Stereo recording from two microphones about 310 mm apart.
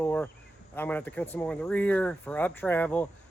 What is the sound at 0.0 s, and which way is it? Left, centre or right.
Insect, centre.